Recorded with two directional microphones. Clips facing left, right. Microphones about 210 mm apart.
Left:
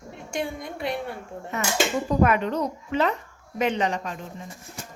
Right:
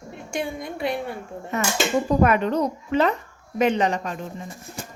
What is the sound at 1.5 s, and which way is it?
Speech, 40° right (ahead or behind).